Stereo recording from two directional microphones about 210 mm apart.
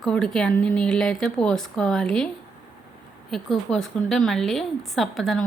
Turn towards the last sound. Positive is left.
turn(degrees=0)  # may be behind; listen again after turning